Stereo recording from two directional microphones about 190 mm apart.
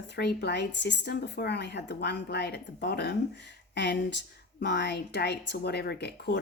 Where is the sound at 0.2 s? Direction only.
60° left (ahead or behind).